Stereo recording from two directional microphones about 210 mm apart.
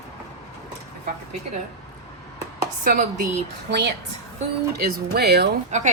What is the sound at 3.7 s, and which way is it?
Speech, 55° right (ahead or behind).